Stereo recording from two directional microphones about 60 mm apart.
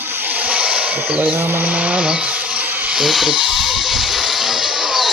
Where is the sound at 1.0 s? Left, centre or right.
Right.